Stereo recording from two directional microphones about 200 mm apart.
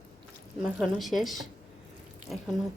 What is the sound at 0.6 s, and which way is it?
Speech, centre (ahead or behind).